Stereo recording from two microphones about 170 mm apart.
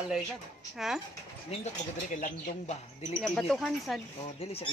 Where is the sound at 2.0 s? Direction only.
50° left (ahead or behind).